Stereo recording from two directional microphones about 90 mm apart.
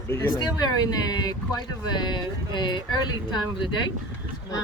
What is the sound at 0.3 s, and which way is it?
Speech, 50° left (ahead or behind).